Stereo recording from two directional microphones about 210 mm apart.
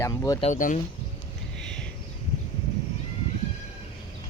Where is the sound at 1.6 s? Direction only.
5° left (ahead or behind).